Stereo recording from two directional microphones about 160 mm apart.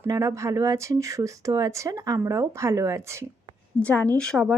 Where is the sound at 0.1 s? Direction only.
20° right (ahead or behind).